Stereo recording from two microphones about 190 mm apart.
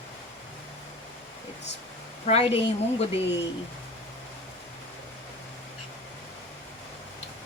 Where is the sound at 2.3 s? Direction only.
30° left (ahead or behind).